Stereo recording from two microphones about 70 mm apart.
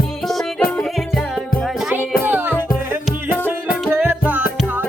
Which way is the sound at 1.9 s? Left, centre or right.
Right.